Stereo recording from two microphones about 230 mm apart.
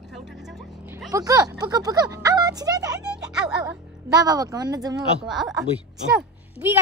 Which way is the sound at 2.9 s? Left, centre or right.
Centre.